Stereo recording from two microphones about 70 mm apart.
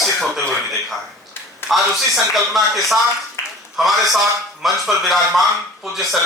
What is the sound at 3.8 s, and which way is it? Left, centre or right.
A man's voice, centre.